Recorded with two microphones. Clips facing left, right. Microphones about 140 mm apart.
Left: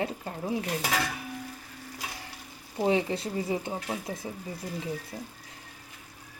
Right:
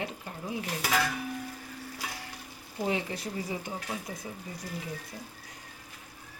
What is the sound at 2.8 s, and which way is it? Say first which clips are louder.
Speech: left 6 dB; 25° left (ahead or behind).